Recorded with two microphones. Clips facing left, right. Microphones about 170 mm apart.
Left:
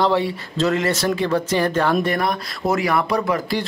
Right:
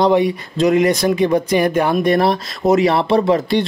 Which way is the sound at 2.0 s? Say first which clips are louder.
Right 7 dB; 25° right (ahead or behind).